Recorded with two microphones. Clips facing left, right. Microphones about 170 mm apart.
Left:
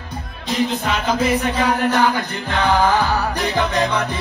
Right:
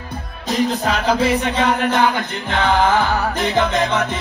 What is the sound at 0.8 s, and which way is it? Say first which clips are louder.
Music: right 2 dB; 30° right (ahead or behind).